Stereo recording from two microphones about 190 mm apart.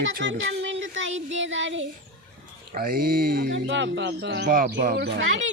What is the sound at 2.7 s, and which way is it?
Speech, 50° right (ahead or behind).